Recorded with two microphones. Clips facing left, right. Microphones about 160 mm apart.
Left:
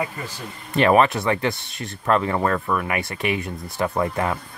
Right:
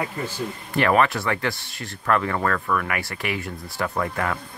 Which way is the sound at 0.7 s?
20° left (ahead or behind).